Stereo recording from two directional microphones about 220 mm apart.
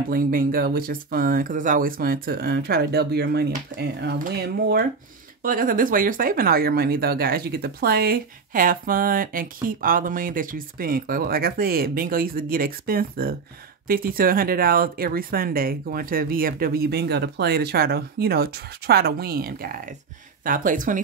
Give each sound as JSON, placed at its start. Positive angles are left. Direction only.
{"t": 0.1, "sound": "speech", "side_deg": -40}